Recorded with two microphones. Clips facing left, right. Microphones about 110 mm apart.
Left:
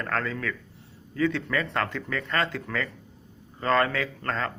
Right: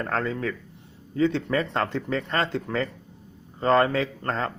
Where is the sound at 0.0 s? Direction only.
25° right (ahead or behind).